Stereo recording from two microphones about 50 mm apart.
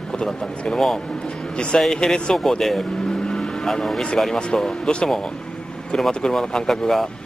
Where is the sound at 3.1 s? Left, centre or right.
Centre.